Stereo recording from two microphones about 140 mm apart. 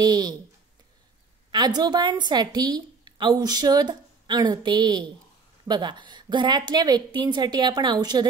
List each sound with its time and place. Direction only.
0.0 s a woman's voice: 30° right (ahead or behind)
1.5 s a woman's voice: 30° right (ahead or behind)